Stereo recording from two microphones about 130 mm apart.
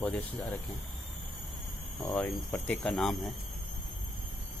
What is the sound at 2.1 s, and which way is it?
Speech, 15° left (ahead or behind).